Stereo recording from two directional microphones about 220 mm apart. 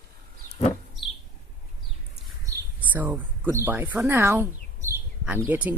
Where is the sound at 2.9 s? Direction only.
10° right (ahead or behind).